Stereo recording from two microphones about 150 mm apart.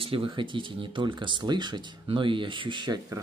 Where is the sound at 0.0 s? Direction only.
35° right (ahead or behind).